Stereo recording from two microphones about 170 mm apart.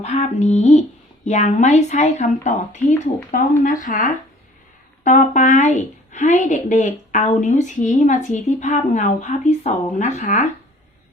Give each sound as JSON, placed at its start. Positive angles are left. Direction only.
{"t": 0.0, "sound": "a woman's voice", "side_deg": 40}